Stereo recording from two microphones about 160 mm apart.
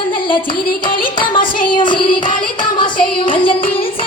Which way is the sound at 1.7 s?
30° left (ahead or behind).